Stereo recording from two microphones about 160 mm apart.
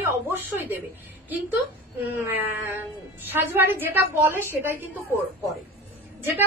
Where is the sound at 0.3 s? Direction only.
15° right (ahead or behind).